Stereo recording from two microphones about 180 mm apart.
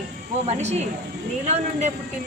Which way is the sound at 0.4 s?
40° right (ahead or behind).